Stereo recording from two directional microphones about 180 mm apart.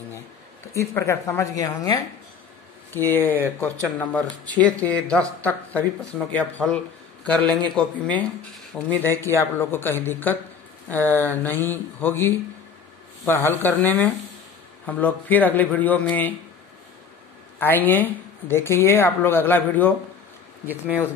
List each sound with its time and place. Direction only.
0.7 s a woman's voice: 15° left (ahead or behind)
9.2 s a woman's voice: 15° left (ahead or behind)
17.6 s a woman's voice: 10° left (ahead or behind)
20.6 s speech: 10° right (ahead or behind)